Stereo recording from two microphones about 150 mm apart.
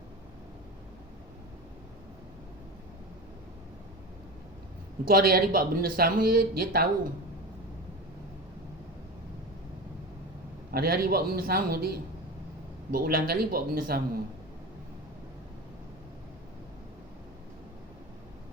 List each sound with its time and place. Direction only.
5.0 s speech: 80° right
10.7 s speech: 90° right